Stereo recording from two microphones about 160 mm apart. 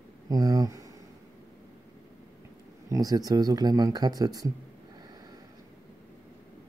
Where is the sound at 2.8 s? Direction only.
20° right (ahead or behind).